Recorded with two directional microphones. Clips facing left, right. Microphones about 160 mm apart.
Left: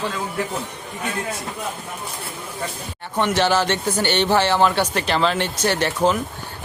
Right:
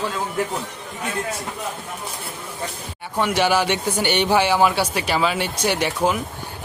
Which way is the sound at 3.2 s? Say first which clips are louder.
Even; 10° right (ahead or behind).